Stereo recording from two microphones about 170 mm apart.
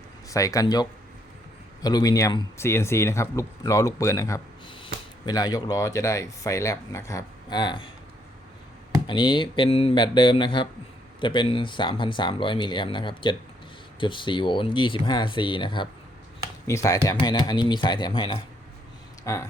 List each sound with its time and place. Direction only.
0.3 s speech: 20° left (ahead or behind)
9.0 s speech: 30° left (ahead or behind)
16.6 s speech: 20° left (ahead or behind)
19.2 s speech: 15° left (ahead or behind)